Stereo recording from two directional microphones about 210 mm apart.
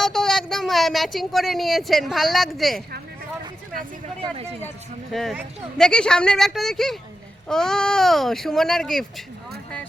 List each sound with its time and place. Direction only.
0.0 s speech: centre (ahead or behind)
3.8 s a sound: 30° right (ahead or behind)
5.1 s speech: centre (ahead or behind)